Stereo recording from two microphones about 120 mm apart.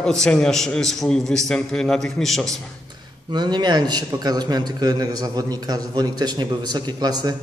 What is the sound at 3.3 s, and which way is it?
A man's voice, 35° right (ahead or behind).